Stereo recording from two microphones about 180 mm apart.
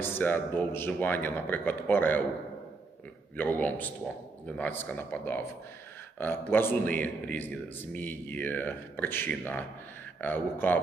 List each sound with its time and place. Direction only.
0.0 s speech: 10° left (ahead or behind)
3.3 s speech: 10° left (ahead or behind)